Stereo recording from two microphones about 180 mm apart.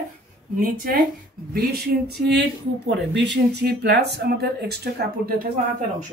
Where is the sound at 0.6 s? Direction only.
50° right (ahead or behind).